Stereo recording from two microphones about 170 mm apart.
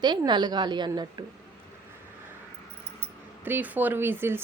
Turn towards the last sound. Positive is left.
turn(degrees=-15)  # may be behind; listen again after turning